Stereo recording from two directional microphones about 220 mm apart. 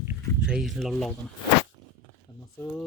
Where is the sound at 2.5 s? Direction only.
5° left (ahead or behind).